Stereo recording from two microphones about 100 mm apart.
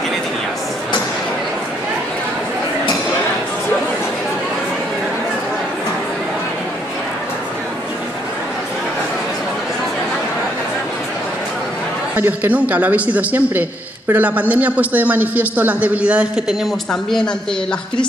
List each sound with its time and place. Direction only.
12.2 s a man's voice: 15° right (ahead or behind)
16.9 s speech: 5° left (ahead or behind)